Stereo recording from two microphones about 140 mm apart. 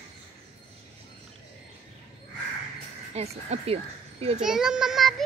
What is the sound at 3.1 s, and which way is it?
Speech, 50° right (ahead or behind).